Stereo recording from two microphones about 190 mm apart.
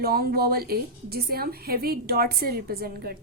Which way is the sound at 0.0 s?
50° right (ahead or behind).